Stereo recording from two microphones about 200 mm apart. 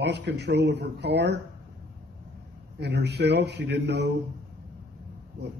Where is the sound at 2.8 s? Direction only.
55° right (ahead or behind).